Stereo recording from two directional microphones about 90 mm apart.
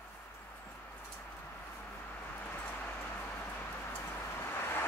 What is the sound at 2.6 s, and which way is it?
Vehicle, 15° left (ahead or behind).